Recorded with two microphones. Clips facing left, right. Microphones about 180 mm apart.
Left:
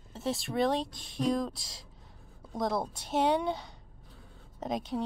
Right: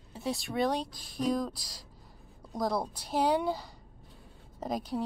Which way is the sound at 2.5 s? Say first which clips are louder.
Even; centre (ahead or behind).